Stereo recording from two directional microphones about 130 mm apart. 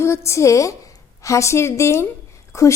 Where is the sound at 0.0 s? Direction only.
20° left (ahead or behind).